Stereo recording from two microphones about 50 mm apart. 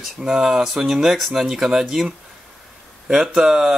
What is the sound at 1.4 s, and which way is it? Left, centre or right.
Speech, centre.